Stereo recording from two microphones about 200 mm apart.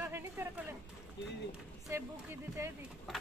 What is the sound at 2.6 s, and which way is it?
Speech, 15° right (ahead or behind).